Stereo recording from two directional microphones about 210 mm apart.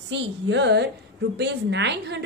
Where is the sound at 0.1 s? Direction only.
55° right (ahead or behind).